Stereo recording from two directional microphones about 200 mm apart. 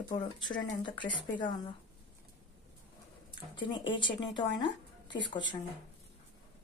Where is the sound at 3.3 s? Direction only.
25° left (ahead or behind).